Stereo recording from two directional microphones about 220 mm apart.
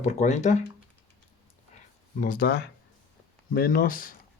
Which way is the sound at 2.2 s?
40° left (ahead or behind).